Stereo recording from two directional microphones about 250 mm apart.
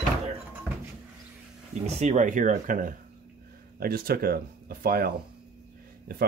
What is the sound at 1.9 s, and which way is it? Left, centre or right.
Speech, right.